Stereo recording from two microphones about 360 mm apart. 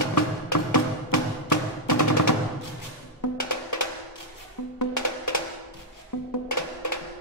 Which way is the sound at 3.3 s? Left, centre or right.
Left.